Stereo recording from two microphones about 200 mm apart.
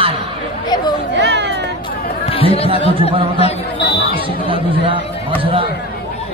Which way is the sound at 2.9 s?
25° right (ahead or behind).